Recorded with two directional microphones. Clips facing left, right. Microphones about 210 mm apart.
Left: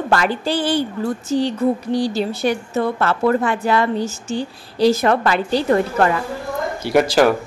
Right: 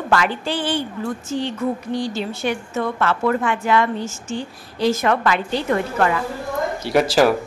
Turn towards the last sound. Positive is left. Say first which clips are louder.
# left 1 dB
turn(degrees=0)  # may be behind; listen again after turning